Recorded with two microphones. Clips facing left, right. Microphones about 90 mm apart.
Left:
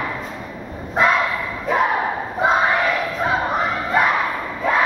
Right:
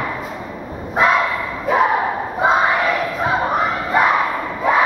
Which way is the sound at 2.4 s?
5° right (ahead or behind).